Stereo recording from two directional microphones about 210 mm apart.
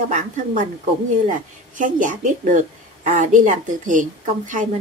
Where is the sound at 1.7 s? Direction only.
35° right (ahead or behind).